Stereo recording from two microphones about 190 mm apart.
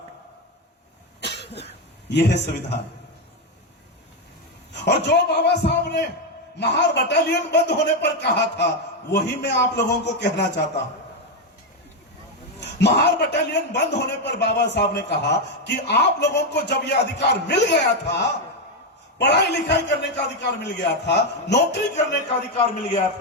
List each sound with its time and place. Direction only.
1.2 s cough: 60° left (ahead or behind)
2.0 s a man's voice: 65° left (ahead or behind)
4.7 s a man's voice: 65° left (ahead or behind)
12.5 s a man's voice: 65° left (ahead or behind)
21.9 s a man's voice: 35° left (ahead or behind)